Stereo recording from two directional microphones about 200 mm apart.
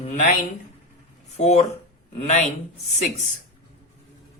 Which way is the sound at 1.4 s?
35° left (ahead or behind).